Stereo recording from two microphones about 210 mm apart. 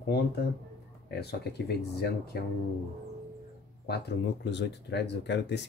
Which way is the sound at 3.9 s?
55° left (ahead or behind).